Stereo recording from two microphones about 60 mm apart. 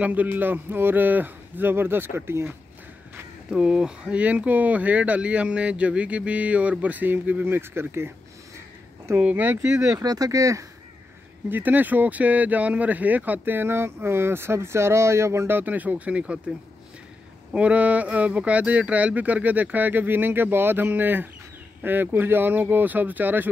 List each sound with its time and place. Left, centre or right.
0.0 s speech: right
3.4 s speech: centre
4.2 s speech: right
9.2 s speech: right
9.8 s speech: right
11.4 s speech: right
17.6 s speech: right